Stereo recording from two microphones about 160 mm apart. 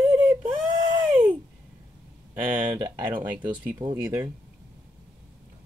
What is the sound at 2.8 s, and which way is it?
Speech, 25° right (ahead or behind).